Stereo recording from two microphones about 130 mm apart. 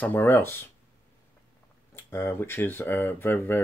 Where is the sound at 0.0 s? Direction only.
15° left (ahead or behind).